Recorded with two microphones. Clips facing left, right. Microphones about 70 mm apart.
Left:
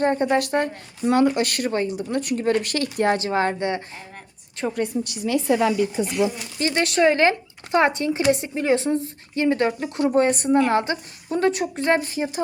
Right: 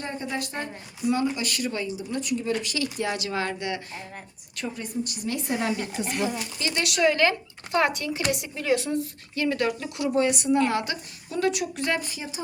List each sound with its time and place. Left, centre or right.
0.0 s speech: left
4.7 s a woman's voice: left
6.6 s speech: left